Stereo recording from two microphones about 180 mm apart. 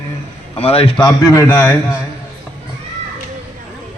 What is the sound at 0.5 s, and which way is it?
Speech, 30° left (ahead or behind).